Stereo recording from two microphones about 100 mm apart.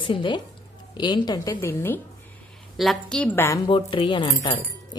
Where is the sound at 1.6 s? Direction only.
25° left (ahead or behind).